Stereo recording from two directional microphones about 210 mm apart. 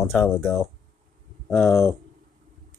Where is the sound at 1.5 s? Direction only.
Centre (ahead or behind).